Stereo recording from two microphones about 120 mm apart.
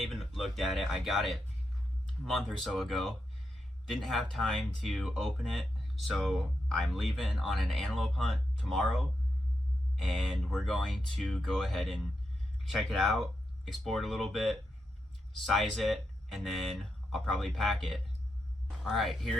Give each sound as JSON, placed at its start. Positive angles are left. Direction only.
{"t": 0.0, "sound": "speech", "side_deg": 0}